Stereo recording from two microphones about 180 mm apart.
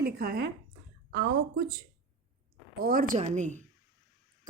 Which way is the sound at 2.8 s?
50° right (ahead or behind).